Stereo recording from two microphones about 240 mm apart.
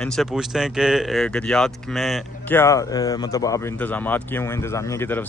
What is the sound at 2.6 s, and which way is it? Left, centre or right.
Speech, centre.